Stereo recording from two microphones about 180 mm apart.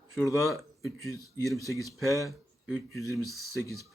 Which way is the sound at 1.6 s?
15° left (ahead or behind).